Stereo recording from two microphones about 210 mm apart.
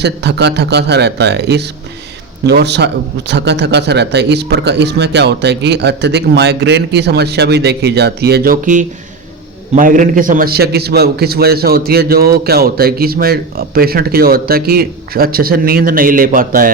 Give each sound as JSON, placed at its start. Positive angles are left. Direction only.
{"t": 0.0, "sound": "a man's voice", "side_deg": -55}